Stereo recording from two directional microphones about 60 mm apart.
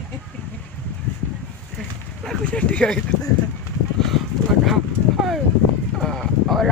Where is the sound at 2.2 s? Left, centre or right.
Centre.